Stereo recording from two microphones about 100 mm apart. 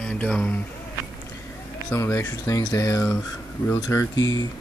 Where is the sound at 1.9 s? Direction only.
30° left (ahead or behind).